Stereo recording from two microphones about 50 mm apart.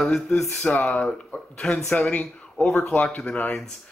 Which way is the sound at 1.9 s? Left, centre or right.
Left.